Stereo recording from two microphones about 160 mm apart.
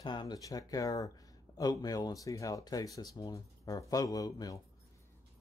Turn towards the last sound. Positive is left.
turn(degrees=20)  # may be behind; listen again after turning